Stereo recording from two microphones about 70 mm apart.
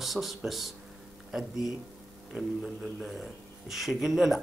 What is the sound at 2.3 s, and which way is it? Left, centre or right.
Speech, centre.